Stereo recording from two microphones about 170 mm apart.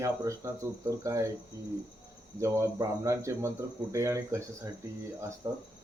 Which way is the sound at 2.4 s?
15° right (ahead or behind).